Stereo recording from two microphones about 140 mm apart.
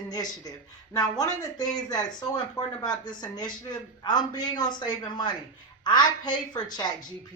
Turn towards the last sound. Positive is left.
turn(degrees=30)  # may be behind; listen again after turning